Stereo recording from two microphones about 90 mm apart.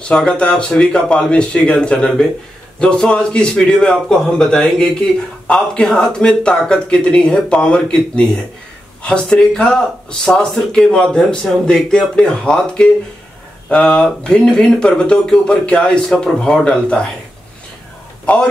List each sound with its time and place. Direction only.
0.1 s a man's voice: 10° left (ahead or behind)
18.2 s a man's voice: 15° left (ahead or behind)